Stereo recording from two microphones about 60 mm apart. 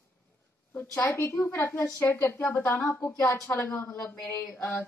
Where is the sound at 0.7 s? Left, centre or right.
Left.